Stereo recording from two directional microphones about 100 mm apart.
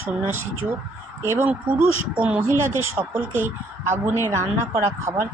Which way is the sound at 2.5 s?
25° right (ahead or behind).